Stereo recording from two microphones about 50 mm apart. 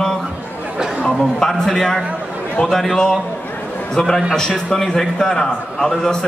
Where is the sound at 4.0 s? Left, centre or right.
Centre.